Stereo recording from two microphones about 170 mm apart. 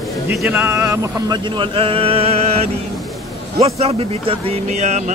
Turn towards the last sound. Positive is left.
turn(degrees=-40)  # may be behind; listen again after turning